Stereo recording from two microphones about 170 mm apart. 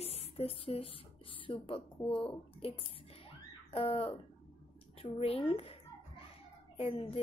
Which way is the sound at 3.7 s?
35° left (ahead or behind).